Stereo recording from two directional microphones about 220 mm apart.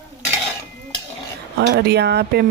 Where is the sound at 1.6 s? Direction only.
50° right (ahead or behind).